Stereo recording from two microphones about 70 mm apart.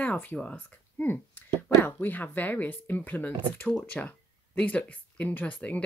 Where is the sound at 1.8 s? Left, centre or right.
Left.